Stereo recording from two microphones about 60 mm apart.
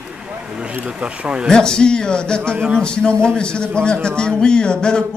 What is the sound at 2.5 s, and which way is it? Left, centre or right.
Speech, right.